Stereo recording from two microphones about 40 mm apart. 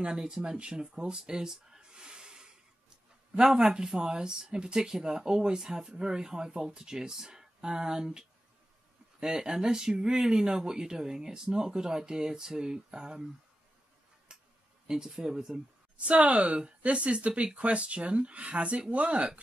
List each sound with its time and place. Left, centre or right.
0.0 s speech: right
3.5 s speech: right
9.2 s speech: centre
14.3 s a sound: right
14.9 s speech: centre
16.0 s speech: right